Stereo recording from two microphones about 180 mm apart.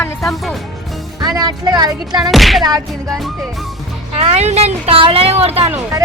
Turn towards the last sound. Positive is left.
turn(degrees=-15)  # may be behind; listen again after turning